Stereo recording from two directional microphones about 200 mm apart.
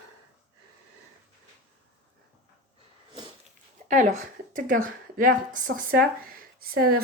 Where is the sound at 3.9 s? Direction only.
40° right (ahead or behind).